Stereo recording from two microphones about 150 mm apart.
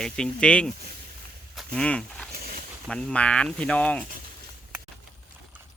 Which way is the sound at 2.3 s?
85° right.